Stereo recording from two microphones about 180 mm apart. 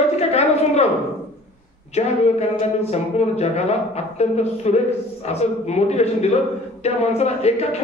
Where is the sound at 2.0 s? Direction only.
35° left (ahead or behind).